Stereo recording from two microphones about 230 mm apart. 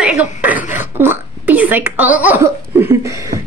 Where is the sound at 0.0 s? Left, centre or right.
Centre.